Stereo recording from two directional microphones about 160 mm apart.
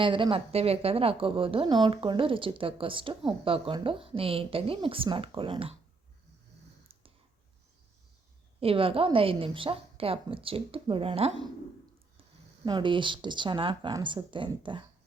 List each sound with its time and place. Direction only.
0.0 s a woman's voice: 30° right (ahead or behind)
8.6 s a woman's voice: 35° right (ahead or behind)
12.6 s speech: 30° right (ahead or behind)